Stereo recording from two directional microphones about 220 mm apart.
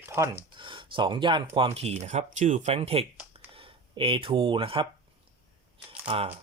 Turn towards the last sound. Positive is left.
turn(degrees=-25)  # may be behind; listen again after turning